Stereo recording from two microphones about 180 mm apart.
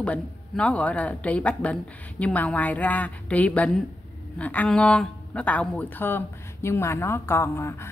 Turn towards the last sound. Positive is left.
turn(degrees=15)  # may be behind; listen again after turning